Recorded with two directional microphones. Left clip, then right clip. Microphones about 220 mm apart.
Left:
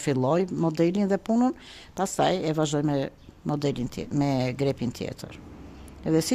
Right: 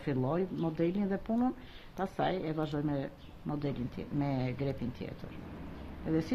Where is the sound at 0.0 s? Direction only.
55° left (ahead or behind).